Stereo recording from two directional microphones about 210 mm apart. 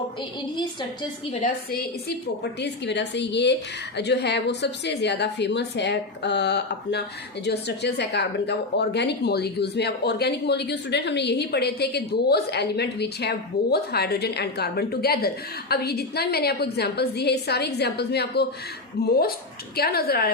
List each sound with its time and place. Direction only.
1.7 s a woman's voice: 50° left (ahead or behind)